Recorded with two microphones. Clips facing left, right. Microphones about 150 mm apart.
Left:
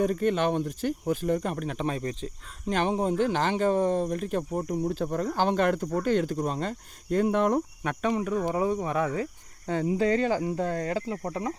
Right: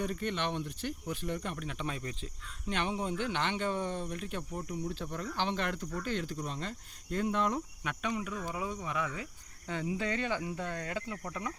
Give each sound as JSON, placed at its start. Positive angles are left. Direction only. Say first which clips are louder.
{"t": 0.0, "sound": "speech", "louder": "left 10 dB", "side_deg": 45}